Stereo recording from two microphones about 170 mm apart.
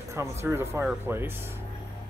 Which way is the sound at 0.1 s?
15° right (ahead or behind).